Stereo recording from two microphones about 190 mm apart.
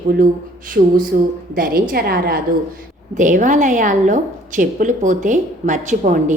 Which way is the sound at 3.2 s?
40° right (ahead or behind).